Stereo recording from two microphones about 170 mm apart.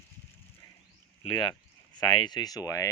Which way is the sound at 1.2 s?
30° left (ahead or behind).